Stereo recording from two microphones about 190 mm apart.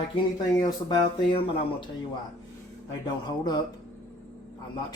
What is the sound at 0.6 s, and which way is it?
Speech, 25° left (ahead or behind).